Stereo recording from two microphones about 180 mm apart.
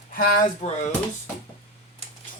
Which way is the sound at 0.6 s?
35° left (ahead or behind).